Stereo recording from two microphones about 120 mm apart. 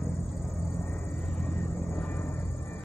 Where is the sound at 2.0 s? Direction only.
Centre (ahead or behind).